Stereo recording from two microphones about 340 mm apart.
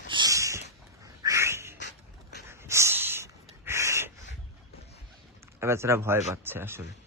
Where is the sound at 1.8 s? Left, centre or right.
Left.